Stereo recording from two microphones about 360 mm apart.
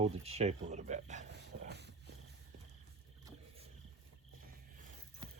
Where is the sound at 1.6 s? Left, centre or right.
Right.